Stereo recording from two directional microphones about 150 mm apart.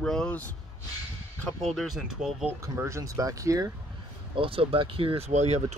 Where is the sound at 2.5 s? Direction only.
20° right (ahead or behind).